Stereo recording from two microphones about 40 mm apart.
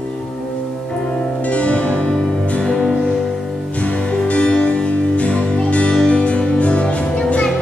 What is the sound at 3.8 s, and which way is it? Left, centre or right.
Music, left.